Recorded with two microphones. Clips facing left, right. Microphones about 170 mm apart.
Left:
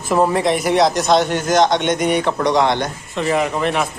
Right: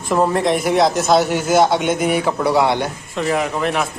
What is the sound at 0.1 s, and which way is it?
A man's voice, centre (ahead or behind).